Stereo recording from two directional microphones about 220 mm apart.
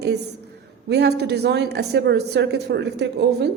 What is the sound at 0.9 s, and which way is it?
A woman's voice, 50° right (ahead or behind).